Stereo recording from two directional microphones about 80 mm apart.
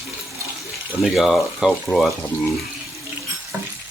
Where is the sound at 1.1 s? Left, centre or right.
Centre.